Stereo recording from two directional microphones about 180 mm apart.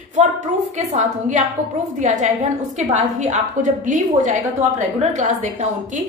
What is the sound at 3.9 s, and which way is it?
A woman's voice, 45° right (ahead or behind).